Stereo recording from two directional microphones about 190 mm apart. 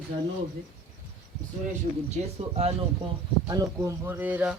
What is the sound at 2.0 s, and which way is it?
Speech, 35° right (ahead or behind).